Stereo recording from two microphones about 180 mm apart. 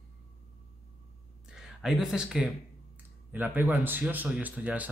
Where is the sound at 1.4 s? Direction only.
5° right (ahead or behind).